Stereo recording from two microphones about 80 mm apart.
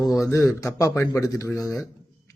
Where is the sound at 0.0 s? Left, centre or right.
Left.